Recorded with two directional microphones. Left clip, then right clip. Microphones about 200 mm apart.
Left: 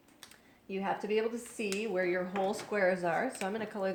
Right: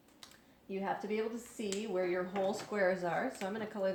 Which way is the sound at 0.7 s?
35° left (ahead or behind).